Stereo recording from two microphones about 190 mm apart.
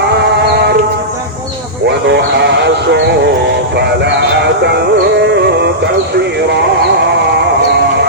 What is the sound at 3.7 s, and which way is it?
Music, 60° right (ahead or behind).